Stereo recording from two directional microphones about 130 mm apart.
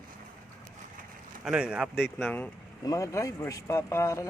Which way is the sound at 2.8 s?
25° left (ahead or behind).